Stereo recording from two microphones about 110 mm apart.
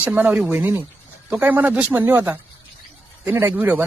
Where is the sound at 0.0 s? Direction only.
15° right (ahead or behind).